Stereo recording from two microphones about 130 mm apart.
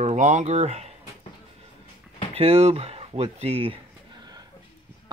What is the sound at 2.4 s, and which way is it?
Speech, 55° right (ahead or behind).